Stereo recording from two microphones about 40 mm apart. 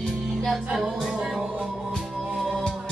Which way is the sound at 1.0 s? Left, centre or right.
Right.